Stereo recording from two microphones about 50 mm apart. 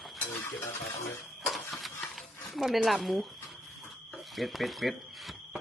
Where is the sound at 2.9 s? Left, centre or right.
Centre.